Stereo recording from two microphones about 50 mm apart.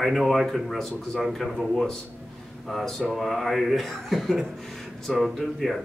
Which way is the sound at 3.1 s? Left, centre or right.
Centre.